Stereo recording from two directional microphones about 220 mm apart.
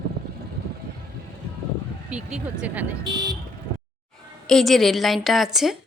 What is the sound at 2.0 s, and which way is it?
Speech, 5° right (ahead or behind).